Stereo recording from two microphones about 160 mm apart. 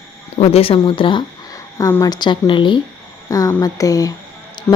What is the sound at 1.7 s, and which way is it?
Speech, 20° left (ahead or behind).